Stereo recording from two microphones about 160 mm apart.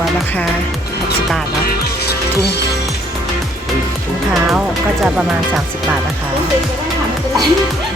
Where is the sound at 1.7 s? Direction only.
80° left.